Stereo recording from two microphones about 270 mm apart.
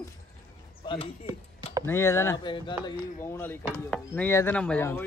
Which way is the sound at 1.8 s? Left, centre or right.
Centre.